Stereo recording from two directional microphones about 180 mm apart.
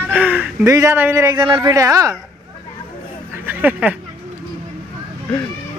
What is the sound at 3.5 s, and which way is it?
Speech, 10° right (ahead or behind).